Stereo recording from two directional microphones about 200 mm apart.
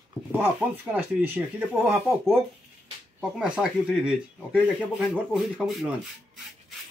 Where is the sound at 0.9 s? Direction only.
10° right (ahead or behind).